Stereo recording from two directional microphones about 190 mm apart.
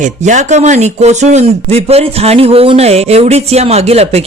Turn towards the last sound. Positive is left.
turn(degrees=-30)  # may be behind; listen again after turning